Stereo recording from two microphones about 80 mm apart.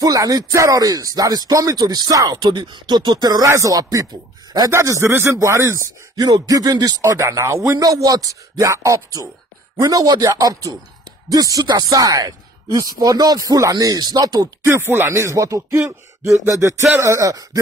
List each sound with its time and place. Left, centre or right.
0.0 s speech: right
2.3 s speech: right
3.4 s speech: right
4.6 s a sound: right
6.1 s speech: right
14.6 s a sound: right